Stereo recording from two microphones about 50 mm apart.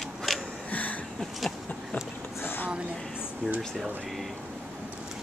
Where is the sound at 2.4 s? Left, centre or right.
Left.